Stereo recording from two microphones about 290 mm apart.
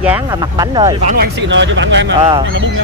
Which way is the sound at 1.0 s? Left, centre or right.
Right.